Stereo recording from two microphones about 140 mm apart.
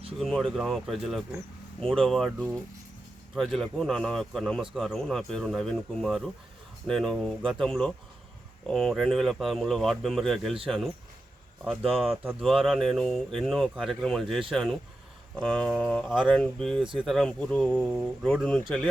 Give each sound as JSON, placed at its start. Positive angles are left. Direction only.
{"t": 0.2, "sound": "speech", "side_deg": 0}
{"t": 12.1, "sound": "speech", "side_deg": -15}
{"t": 12.4, "sound": "speech", "side_deg": 0}